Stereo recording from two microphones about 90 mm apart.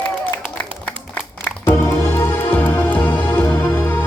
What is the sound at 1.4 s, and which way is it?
Music, 25° left (ahead or behind).